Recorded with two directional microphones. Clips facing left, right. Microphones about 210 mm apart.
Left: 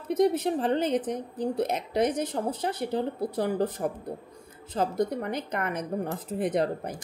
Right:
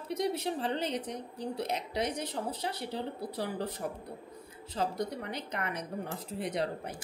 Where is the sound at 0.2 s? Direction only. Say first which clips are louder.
Left 9 dB; 50° left (ahead or behind).